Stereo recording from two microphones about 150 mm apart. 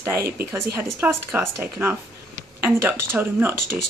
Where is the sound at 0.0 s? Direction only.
15° right (ahead or behind).